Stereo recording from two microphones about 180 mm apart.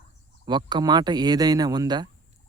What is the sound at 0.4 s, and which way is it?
Speech, 25° right (ahead or behind).